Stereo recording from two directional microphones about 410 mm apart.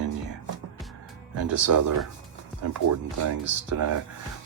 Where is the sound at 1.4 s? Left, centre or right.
Right.